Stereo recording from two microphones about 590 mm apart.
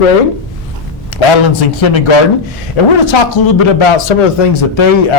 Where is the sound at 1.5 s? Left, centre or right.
Left.